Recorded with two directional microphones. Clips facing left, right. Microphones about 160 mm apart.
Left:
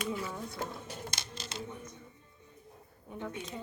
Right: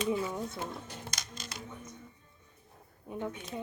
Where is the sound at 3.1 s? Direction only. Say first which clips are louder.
Right 4 dB; 20° right (ahead or behind).